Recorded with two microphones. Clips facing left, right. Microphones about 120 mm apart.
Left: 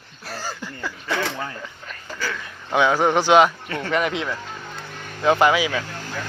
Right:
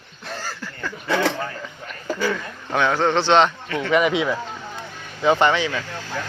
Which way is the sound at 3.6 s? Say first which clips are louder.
Right 3 dB; 40° left (ahead or behind).